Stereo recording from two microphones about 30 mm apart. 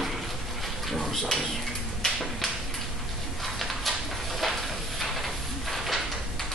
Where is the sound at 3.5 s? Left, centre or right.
Centre.